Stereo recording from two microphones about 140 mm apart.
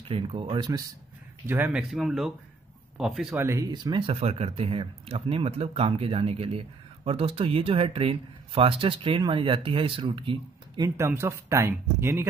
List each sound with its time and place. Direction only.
0.1 s speech: 40° right (ahead or behind)
1.5 s speech: 10° right (ahead or behind)
3.3 s speech: 20° right (ahead or behind); by 10.9 s 35° right (ahead or behind)
11.0 s speech: 20° right (ahead or behind)